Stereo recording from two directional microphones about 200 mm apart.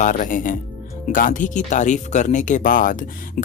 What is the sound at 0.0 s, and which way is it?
Speech, 40° left (ahead or behind).